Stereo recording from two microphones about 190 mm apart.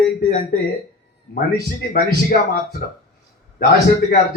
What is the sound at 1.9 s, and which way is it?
Speech, 50° left (ahead or behind).